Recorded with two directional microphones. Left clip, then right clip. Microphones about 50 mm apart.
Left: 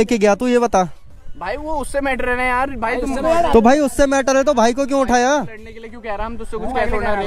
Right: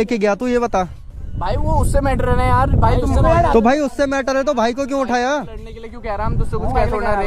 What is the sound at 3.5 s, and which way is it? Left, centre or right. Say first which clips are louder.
Speech: left 2 dB; left.